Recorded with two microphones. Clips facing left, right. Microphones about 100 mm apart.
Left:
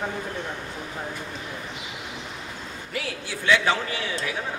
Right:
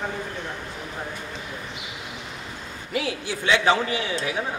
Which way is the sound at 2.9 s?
20° right (ahead or behind).